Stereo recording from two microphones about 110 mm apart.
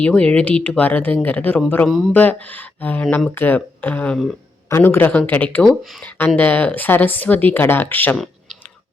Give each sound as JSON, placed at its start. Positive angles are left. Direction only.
{"t": 0.0, "sound": "a woman's voice", "side_deg": 10}
{"t": 8.1, "sound": "clicking", "side_deg": 0}